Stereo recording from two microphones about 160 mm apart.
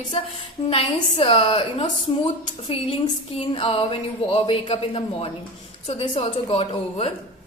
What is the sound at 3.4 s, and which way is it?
A woman's voice, 35° left (ahead or behind).